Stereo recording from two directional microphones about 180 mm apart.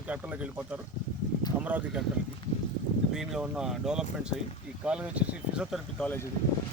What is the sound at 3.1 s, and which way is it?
Speech, 5° right (ahead or behind).